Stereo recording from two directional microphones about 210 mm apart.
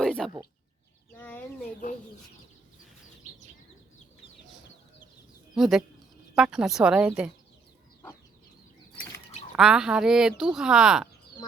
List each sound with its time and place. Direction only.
0.0 s a sound: 5° left (ahead or behind)
1.1 s speech: 10° left (ahead or behind)
5.5 s speech: centre (ahead or behind)
9.6 s speech: 5° right (ahead or behind)